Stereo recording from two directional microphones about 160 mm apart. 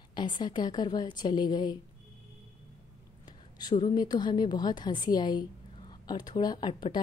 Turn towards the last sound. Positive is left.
turn(degrees=30)  # may be behind; listen again after turning